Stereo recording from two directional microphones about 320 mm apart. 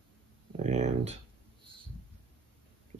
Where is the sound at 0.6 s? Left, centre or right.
Right.